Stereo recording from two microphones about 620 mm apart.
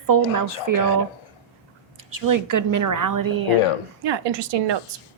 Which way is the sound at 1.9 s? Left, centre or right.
Right.